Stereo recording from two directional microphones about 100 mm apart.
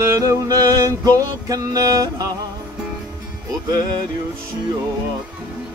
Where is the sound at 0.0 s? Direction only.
30° right (ahead or behind).